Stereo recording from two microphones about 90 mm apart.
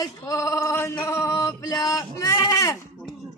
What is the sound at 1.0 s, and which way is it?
Male singing, 30° left (ahead or behind).